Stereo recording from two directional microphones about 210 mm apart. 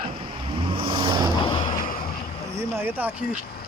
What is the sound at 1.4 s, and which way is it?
Vehicle, 25° left (ahead or behind).